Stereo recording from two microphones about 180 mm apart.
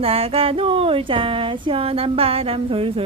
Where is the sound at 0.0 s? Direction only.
30° right (ahead or behind).